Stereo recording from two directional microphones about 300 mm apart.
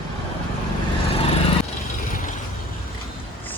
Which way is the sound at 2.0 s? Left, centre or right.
Left.